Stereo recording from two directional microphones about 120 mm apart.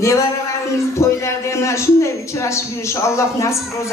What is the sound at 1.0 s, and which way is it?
A man's voice, 25° left (ahead or behind).